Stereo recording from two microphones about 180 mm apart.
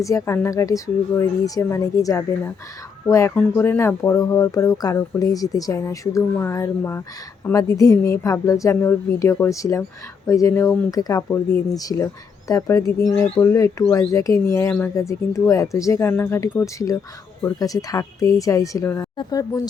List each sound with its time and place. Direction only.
0.0 s speech: 15° left (ahead or behind)